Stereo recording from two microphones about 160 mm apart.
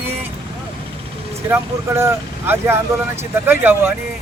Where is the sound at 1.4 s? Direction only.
15° right (ahead or behind).